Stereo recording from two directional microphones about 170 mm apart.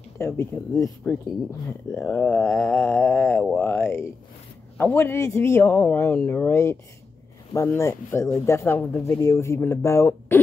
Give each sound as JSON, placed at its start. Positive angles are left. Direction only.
{"t": 0.2, "sound": "a man's voice", "side_deg": 15}